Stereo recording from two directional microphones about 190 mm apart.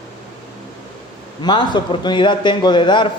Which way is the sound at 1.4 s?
25° left (ahead or behind).